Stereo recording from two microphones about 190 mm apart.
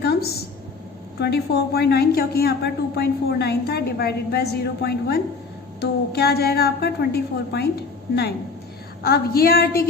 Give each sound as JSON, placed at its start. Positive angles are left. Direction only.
{"t": 0.0, "sound": "a sound", "side_deg": 55}
{"t": 1.2, "sound": "a woman's voice", "side_deg": 60}
{"t": 9.0, "sound": "a woman's voice", "side_deg": 55}